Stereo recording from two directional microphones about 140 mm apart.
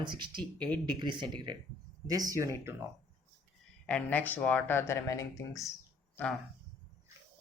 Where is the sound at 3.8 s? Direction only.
10° left (ahead or behind).